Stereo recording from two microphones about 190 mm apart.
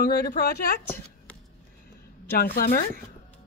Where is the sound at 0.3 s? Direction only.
60° left (ahead or behind).